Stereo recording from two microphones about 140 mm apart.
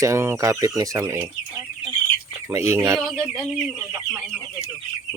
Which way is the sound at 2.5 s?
20° right (ahead or behind).